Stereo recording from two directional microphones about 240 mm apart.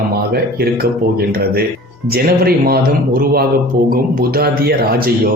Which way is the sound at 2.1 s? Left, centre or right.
Right.